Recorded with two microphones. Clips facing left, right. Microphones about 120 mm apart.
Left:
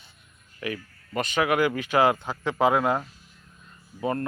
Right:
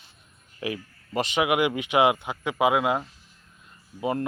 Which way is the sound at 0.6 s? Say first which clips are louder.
Right 1 dB; 25° right (ahead or behind).